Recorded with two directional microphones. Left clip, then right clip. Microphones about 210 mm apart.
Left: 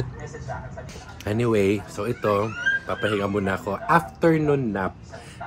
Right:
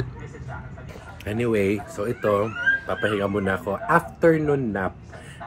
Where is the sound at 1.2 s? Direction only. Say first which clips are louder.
Left 1 dB; 40° left (ahead or behind).